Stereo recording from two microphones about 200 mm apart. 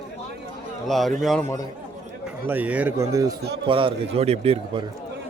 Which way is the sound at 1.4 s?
15° left (ahead or behind).